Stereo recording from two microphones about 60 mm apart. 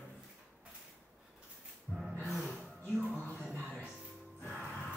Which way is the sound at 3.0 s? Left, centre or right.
Left.